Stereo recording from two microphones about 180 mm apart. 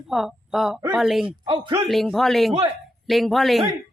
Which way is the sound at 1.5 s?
30° right (ahead or behind).